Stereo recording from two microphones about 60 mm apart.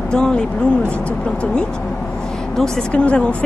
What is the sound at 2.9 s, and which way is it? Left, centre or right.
Speech, centre.